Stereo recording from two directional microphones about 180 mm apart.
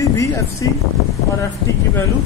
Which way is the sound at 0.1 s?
15° left (ahead or behind).